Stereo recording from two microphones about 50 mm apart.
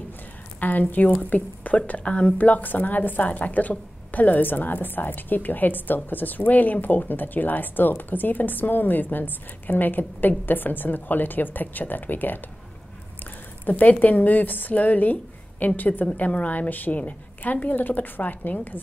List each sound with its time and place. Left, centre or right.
0.6 s a woman's voice: left
13.7 s a woman's voice: left